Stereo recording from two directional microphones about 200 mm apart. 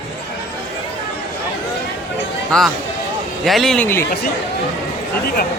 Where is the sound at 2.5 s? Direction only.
5° left (ahead or behind).